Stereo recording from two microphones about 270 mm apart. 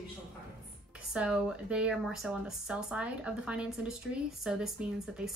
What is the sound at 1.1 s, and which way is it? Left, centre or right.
Speech, centre.